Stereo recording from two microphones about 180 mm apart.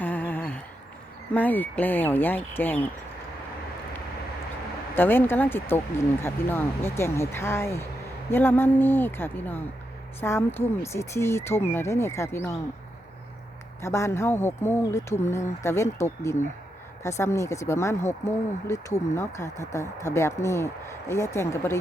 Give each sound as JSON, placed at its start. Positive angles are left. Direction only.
{"t": 0.0, "sound": "a sound", "side_deg": 10}
{"t": 1.3, "sound": "speech", "side_deg": 10}
{"t": 4.9, "sound": "speech", "side_deg": 10}
{"t": 13.8, "sound": "speech", "side_deg": 15}